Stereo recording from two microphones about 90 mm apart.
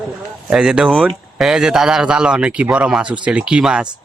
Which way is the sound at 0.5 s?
5° right (ahead or behind).